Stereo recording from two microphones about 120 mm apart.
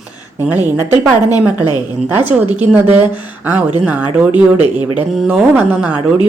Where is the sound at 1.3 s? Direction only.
35° left (ahead or behind).